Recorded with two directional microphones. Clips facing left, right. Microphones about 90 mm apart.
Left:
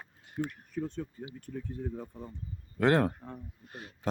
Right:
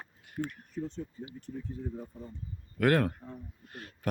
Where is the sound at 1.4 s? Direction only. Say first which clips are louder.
Left 1 dB; 65° left (ahead or behind).